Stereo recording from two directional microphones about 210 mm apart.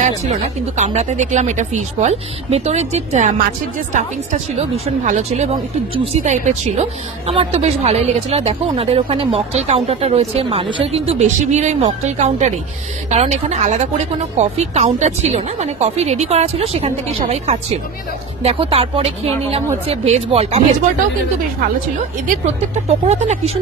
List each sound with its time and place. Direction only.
0.7 s speech: 30° right (ahead or behind)
22.8 s speech: 30° right (ahead or behind)